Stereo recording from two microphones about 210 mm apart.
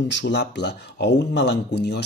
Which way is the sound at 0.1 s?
55° left (ahead or behind).